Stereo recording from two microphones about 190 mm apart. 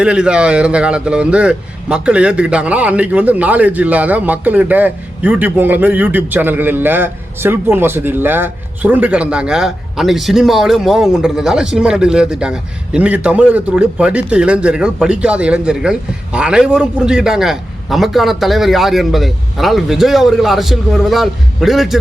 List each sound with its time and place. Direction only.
0.0 s a man's voice: 5° right (ahead or behind)